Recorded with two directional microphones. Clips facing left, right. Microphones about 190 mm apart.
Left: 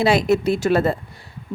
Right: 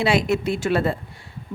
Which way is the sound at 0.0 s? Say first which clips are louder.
Left 3 dB; 40° left (ahead or behind).